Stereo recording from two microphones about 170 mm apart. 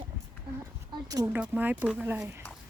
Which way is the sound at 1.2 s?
10° right (ahead or behind).